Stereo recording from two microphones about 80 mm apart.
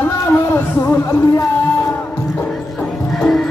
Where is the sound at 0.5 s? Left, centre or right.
Left.